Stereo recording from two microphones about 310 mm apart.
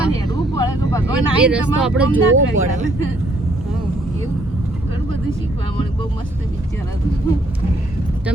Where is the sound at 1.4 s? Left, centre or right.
Centre.